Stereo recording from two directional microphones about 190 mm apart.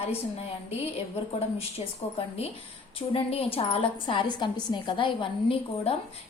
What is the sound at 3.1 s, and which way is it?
A woman's voice, 30° left (ahead or behind).